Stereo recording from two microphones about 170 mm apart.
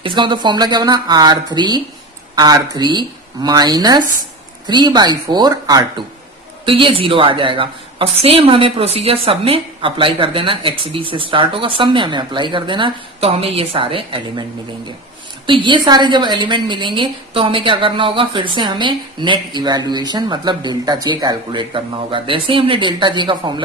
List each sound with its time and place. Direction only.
0.0 s a woman's voice: 30° right (ahead or behind)
15.4 s a woman's voice: 30° right (ahead or behind)